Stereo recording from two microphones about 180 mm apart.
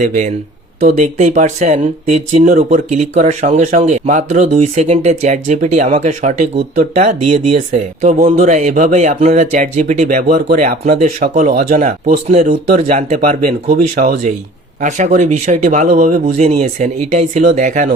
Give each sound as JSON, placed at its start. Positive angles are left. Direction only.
{"t": 0.0, "sound": "speech", "side_deg": -45}